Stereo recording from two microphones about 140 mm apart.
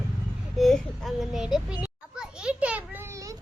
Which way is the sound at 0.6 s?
Centre (ahead or behind).